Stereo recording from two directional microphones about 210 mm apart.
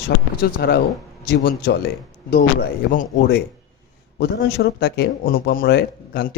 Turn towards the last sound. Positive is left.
turn(degrees=50)  # may be behind; listen again after turning